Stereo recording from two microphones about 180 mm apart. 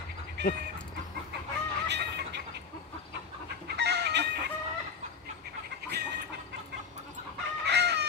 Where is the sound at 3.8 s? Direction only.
65° right (ahead or behind).